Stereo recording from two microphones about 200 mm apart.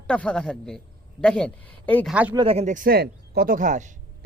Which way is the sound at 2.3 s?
30° right (ahead or behind).